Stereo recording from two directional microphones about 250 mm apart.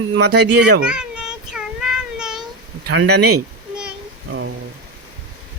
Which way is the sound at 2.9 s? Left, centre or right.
Right.